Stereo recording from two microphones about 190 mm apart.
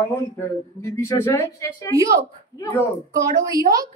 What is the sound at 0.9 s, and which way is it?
Speech, 15° left (ahead or behind).